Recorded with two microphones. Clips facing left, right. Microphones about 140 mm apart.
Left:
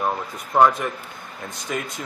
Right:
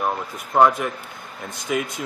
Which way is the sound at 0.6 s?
5° right (ahead or behind).